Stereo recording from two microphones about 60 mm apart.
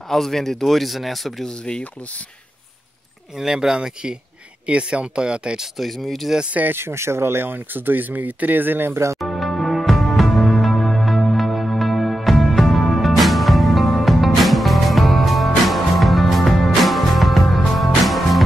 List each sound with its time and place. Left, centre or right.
0.1 s speech: centre
1.5 s speech: centre
3.3 s speech: centre
5.8 s speech: centre
6.5 s speech: right
6.8 s speech: right
9.2 s music: centre